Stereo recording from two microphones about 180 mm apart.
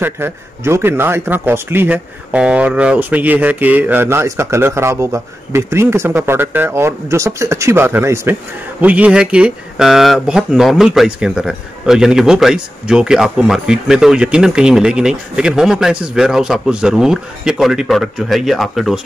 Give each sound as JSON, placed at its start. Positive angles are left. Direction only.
{"t": 0.0, "sound": "speech", "side_deg": -15}